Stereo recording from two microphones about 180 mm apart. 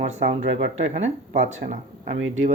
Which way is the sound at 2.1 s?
90° right.